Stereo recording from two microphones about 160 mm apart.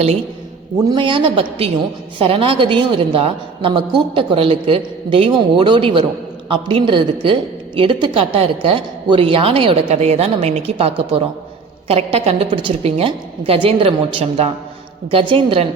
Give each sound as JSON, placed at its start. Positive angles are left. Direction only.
{"t": 0.9, "sound": "a woman's voice", "side_deg": -30}